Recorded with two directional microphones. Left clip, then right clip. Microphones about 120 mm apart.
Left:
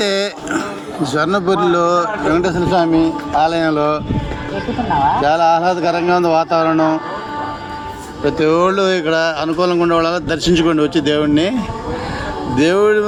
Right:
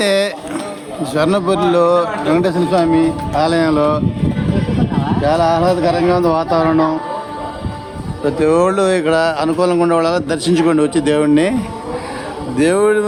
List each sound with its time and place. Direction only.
0.0 s speech: 10° right (ahead or behind)
5.2 s speech: 15° right (ahead or behind)
8.2 s speech: 10° right (ahead or behind)
12.5 s speech: 15° right (ahead or behind)